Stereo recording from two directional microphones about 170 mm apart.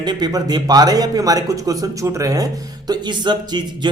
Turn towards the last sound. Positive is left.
turn(degrees=-25)  # may be behind; listen again after turning